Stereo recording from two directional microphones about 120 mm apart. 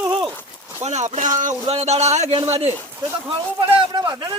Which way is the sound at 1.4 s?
90° right.